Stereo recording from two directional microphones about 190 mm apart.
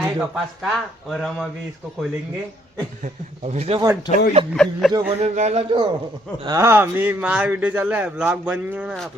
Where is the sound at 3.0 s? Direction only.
35° right (ahead or behind).